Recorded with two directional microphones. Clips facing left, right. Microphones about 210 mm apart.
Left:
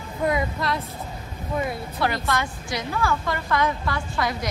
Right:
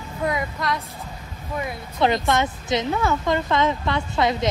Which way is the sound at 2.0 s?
20° right (ahead or behind).